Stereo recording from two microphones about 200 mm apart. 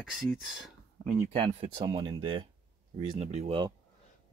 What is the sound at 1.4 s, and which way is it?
Speech, 25° right (ahead or behind).